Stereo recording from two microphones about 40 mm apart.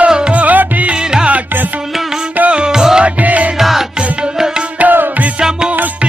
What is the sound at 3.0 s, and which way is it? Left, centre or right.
Music, right.